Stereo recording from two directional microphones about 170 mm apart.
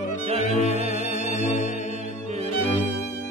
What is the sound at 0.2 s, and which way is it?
Music, 35° right (ahead or behind).